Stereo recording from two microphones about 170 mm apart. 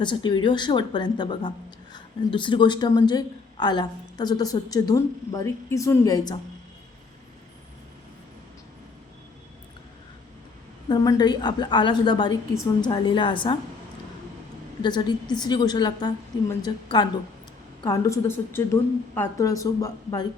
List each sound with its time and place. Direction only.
0.0 s a woman's voice: 25° left (ahead or behind)
10.8 s a woman's voice: 25° left (ahead or behind)
14.8 s a woman's voice: 25° left (ahead or behind)